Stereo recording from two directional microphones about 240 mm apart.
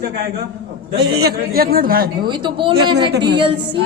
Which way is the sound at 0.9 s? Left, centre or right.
Right.